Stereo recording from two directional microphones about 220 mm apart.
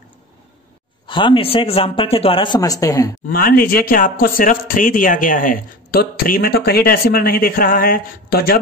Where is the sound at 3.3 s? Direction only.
40° left (ahead or behind).